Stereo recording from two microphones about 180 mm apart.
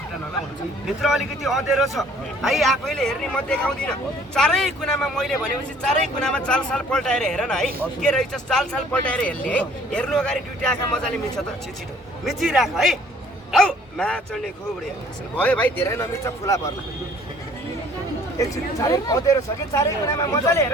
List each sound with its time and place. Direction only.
1.0 s a man's voice: centre (ahead or behind)
12.2 s a man's voice: centre (ahead or behind); by 16.6 s 15° left (ahead or behind)
18.3 s speech: 20° left (ahead or behind)